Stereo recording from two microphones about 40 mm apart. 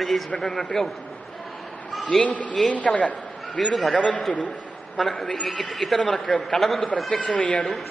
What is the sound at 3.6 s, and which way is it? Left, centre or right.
Speech, centre.